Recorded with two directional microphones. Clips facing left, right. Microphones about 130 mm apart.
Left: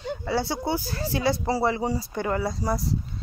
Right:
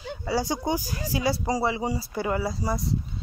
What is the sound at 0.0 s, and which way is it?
Speech, 10° right (ahead or behind).